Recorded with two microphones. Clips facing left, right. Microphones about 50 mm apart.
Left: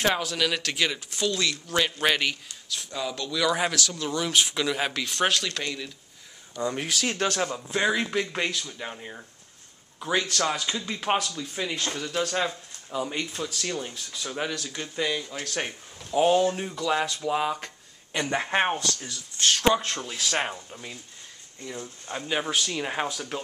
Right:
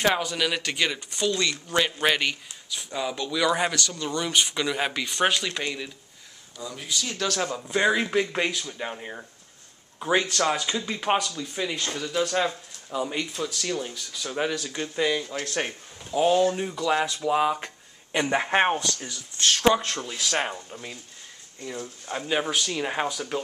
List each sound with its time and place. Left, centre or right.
0.0 s speech: centre
6.6 s speech: left
6.9 s speech: left
7.3 s speech: centre
16.3 s speech: left
16.5 s speech: centre
19.3 s speech: centre
22.1 s speech: centre